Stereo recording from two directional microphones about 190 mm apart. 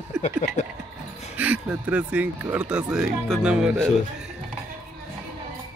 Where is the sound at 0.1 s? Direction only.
5° right (ahead or behind).